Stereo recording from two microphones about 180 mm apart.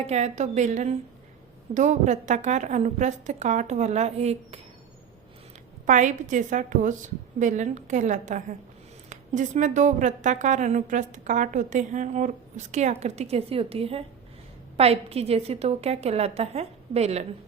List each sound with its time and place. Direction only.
0.1 s a woman's voice: 40° right (ahead or behind)
5.8 s a woman's voice: 45° right (ahead or behind)